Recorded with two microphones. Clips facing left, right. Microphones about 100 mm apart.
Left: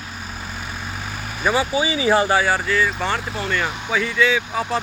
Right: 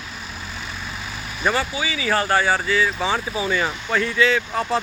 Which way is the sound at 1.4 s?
10° left (ahead or behind).